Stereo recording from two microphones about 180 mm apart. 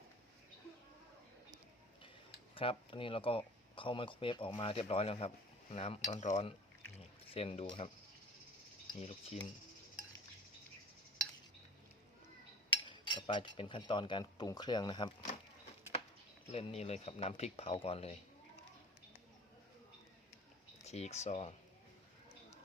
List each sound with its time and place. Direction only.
2.6 s speech: 30° left (ahead or behind)
8.9 s speech: 30° left (ahead or behind)
12.7 s speech: 25° left (ahead or behind)
16.5 s speech: 35° left (ahead or behind)
20.8 s speech: 35° left (ahead or behind)